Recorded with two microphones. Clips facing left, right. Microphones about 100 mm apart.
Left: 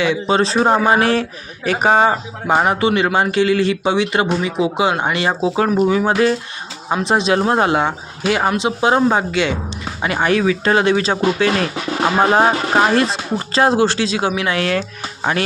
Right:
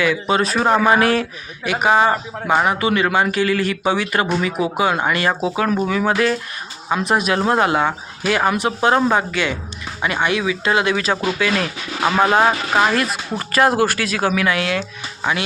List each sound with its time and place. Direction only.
0.0 s speech: 30° left (ahead or behind)
5.9 s speech: 30° left (ahead or behind)